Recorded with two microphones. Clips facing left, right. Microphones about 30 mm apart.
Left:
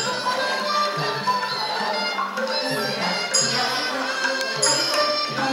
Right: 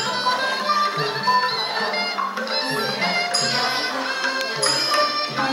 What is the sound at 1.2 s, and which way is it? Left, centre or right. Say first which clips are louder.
Music: right 6 dB; centre.